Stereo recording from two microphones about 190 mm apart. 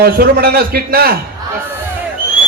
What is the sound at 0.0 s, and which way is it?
A man's voice, 50° right (ahead or behind).